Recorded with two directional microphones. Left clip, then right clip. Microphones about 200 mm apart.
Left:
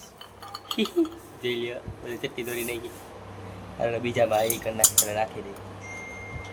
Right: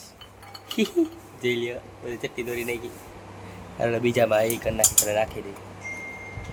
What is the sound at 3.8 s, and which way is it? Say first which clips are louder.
Cutlery: right 2 dB; 25° right (ahead or behind).